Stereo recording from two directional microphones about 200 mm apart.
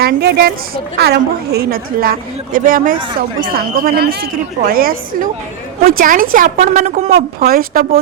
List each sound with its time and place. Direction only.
0.0 s speech: 50° right (ahead or behind)